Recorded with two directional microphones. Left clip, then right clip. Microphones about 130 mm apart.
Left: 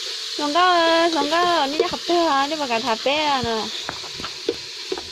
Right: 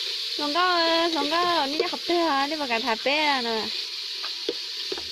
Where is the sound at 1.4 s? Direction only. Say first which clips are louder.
Left 4 dB; 20° right (ahead or behind).